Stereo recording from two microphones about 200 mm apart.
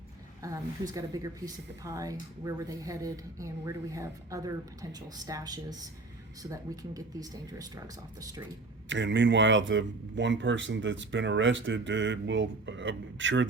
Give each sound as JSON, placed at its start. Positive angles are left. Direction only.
{"t": 0.4, "sound": "speech", "side_deg": -15}
{"t": 8.9, "sound": "speech", "side_deg": -65}